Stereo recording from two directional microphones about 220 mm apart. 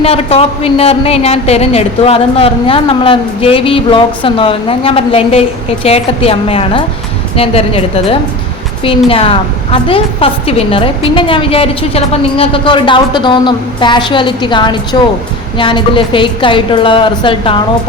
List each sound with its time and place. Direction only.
0.0 s a woman's voice: 25° left (ahead or behind)